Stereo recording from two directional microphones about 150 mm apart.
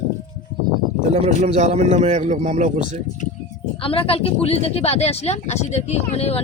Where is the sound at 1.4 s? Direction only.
55° right (ahead or behind).